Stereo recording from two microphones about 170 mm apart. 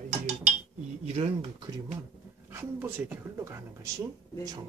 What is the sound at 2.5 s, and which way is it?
Speech, 15° right (ahead or behind).